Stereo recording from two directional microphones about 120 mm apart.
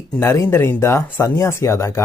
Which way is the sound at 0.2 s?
20° left (ahead or behind).